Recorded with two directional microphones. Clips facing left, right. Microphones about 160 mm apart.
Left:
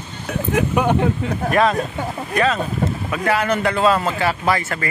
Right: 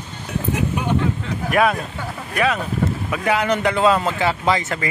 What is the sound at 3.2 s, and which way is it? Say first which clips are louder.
A man's voice: even; 15° right (ahead or behind).